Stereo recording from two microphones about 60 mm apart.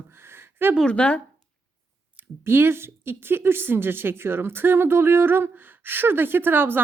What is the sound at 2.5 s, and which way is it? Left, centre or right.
A woman's voice, right.